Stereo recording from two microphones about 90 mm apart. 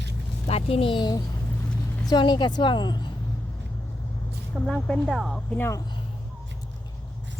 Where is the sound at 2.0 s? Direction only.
55° left (ahead or behind).